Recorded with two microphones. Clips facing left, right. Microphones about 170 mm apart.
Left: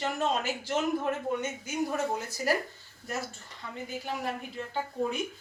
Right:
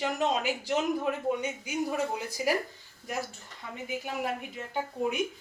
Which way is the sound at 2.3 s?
10° right (ahead or behind).